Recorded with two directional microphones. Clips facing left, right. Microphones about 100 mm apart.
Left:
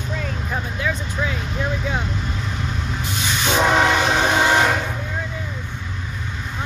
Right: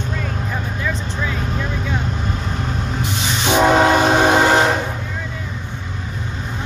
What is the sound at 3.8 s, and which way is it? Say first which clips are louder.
Train: right 4 dB; 35° right (ahead or behind).